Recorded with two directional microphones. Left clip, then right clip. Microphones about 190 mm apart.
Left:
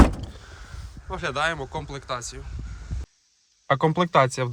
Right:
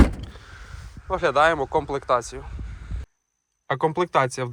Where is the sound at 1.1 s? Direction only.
5° left (ahead or behind).